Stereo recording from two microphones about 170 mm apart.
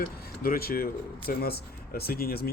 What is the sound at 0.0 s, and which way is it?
Speech, 60° left (ahead or behind).